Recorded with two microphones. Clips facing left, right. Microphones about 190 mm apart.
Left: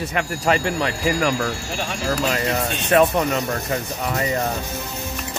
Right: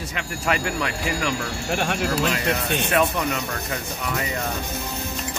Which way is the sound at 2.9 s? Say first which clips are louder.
Left 7 dB; 40° left (ahead or behind).